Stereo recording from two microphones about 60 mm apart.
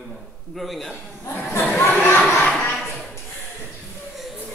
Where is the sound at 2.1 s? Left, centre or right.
Left.